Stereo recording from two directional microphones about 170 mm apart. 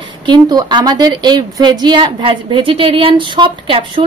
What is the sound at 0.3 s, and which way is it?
A woman's voice, 25° right (ahead or behind).